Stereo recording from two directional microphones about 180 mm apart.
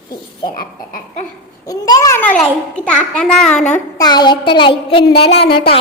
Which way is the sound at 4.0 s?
25° left (ahead or behind).